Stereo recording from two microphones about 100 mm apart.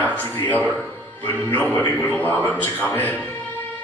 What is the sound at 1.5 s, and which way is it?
A man's voice, 20° left (ahead or behind).